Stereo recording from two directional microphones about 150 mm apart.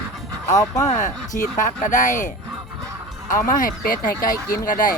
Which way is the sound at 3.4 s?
70° left (ahead or behind).